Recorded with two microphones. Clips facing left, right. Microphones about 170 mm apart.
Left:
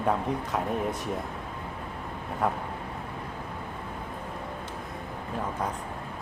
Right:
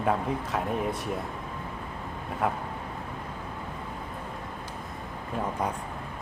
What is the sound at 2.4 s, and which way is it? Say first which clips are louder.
Speech: even; centre (ahead or behind).